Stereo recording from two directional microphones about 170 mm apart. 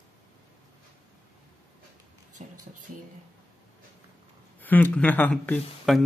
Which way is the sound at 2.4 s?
45° right (ahead or behind).